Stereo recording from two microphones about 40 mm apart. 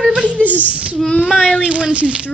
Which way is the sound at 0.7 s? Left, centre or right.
Right.